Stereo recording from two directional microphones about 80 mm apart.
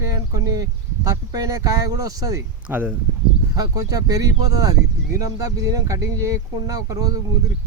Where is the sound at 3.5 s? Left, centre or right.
Right.